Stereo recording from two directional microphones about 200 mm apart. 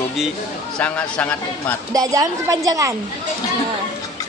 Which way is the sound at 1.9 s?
15° right (ahead or behind).